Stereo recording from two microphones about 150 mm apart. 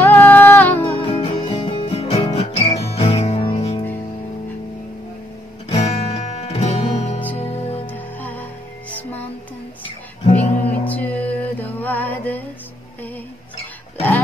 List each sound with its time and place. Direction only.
0.0 s music: 10° left (ahead or behind)
1.0 s music: 40° left (ahead or behind)
5.7 s music: 45° left (ahead or behind)
7.8 s music: 10° left (ahead or behind)
10.5 s music: 10° left (ahead or behind)